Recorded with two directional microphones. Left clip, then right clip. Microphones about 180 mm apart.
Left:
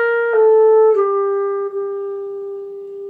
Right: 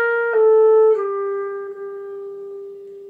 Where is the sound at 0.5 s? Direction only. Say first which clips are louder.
Left 1 dB; centre (ahead or behind).